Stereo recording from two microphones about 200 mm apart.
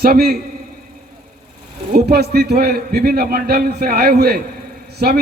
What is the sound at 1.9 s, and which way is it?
A man's voice, 50° right (ahead or behind).